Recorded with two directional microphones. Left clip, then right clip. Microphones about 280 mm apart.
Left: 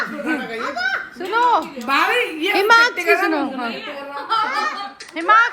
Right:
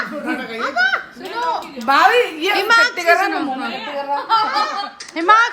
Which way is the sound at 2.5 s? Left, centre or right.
Centre.